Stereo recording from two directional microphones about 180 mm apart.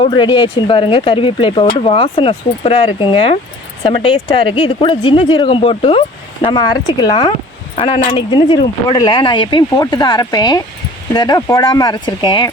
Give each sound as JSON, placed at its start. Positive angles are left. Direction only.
{"t": 0.0, "sound": "speech", "side_deg": 25}